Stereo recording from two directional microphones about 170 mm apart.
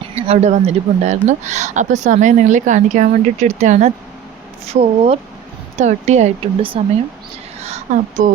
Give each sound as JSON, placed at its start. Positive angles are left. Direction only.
{"t": 0.2, "sound": "speech", "side_deg": -40}
{"t": 7.9, "sound": "speech", "side_deg": -45}